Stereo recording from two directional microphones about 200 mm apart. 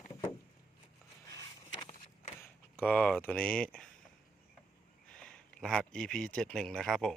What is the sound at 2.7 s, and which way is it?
Speech, 5° left (ahead or behind).